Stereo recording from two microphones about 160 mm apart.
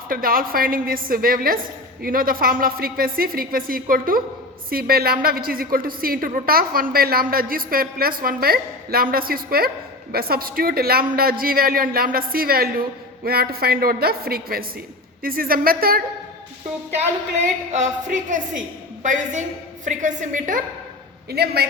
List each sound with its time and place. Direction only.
0.1 s a woman's voice: 65° right (ahead or behind)
17.7 s a woman's voice: 50° right (ahead or behind)
21.2 s a man's voice: 85° right